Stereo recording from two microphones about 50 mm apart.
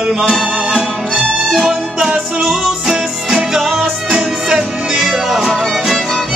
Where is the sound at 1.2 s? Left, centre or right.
Centre.